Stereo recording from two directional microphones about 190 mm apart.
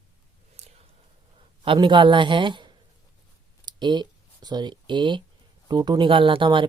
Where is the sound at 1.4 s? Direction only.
25° right (ahead or behind).